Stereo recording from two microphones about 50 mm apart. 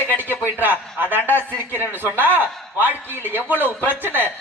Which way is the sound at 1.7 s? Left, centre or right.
Right.